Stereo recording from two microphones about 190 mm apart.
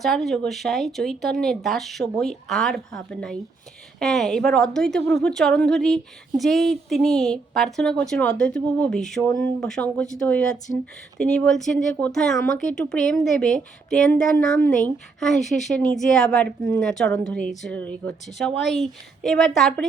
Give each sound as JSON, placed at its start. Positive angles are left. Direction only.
{"t": 0.0, "sound": "speech", "side_deg": 0}